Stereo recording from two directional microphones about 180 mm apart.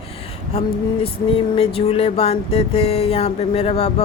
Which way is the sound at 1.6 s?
35° left (ahead or behind).